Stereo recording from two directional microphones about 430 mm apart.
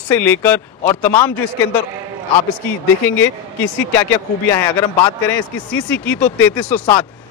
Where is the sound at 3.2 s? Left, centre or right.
Centre.